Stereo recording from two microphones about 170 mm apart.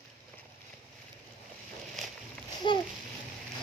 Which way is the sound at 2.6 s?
30° left (ahead or behind).